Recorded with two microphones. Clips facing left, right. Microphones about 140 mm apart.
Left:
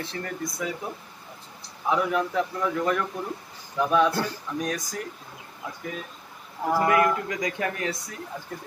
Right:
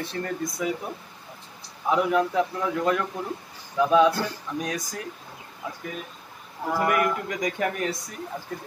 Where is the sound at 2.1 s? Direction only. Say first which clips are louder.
Right 3 dB; 20° right (ahead or behind).